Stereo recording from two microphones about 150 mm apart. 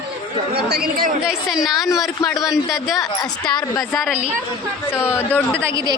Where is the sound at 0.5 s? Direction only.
90° right.